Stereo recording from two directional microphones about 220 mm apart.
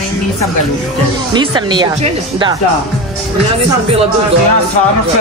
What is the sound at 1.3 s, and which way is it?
Speech, 20° right (ahead or behind).